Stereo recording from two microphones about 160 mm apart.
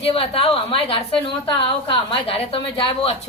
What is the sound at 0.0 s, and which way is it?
A woman's voice, 35° left (ahead or behind).